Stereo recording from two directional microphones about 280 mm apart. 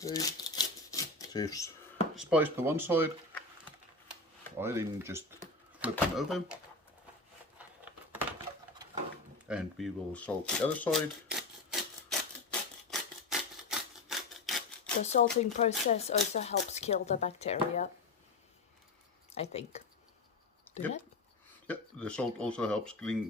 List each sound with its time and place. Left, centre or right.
0.0 s a sound: centre
2.1 s speech: centre
4.5 s speech: centre
7.6 s a sound: centre
9.5 s speech: centre
12.9 s rub: centre
15.0 s speech: left
19.3 s speech: left
20.7 s a sound: centre
21.7 s speech: centre